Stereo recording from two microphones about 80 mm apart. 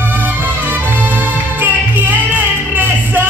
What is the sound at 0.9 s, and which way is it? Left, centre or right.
Music, right.